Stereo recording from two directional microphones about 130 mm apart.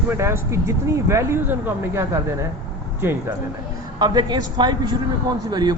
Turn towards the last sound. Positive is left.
turn(degrees=-35)  # may be behind; listen again after turning